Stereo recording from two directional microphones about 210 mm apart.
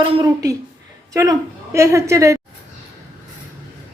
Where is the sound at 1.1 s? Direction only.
15° right (ahead or behind).